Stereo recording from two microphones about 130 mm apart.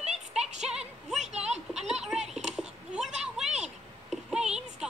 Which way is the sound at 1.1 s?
55° right (ahead or behind).